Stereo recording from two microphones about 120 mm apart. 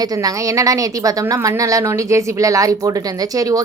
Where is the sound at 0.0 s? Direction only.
30° right (ahead or behind).